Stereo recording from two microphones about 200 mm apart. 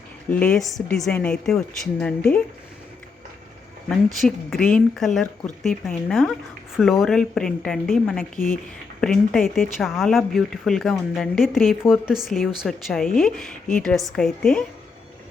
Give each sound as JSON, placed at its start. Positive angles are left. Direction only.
{"t": 0.3, "sound": "speech", "side_deg": 5}
{"t": 3.8, "sound": "speech", "side_deg": 0}